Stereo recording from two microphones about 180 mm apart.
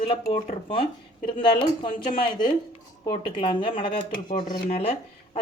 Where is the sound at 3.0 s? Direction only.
25° left (ahead or behind).